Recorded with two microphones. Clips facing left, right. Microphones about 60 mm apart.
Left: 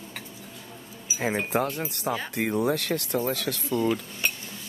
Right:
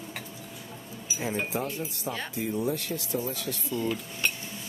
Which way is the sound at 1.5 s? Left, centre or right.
Left.